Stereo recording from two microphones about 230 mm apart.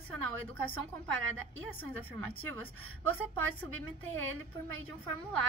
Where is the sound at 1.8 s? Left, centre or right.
Centre.